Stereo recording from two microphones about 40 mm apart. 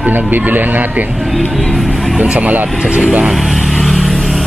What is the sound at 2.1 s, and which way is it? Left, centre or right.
Speech, right.